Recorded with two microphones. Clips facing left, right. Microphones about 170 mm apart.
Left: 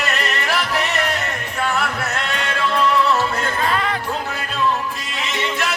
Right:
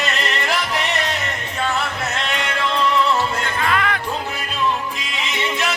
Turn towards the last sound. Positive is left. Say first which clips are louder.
# even
turn(degrees=35)  # may be behind; listen again after turning